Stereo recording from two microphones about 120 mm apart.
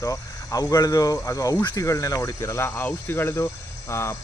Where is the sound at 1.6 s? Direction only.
40° left (ahead or behind).